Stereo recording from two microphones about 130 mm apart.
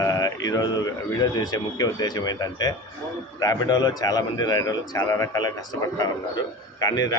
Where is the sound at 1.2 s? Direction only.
30° left (ahead or behind).